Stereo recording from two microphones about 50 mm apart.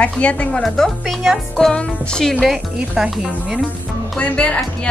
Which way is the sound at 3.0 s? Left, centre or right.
Centre.